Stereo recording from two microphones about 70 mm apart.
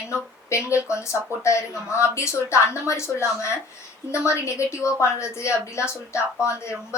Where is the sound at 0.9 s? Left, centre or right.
Left.